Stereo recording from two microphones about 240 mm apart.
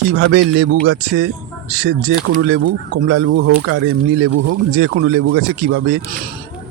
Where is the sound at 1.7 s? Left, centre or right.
Right.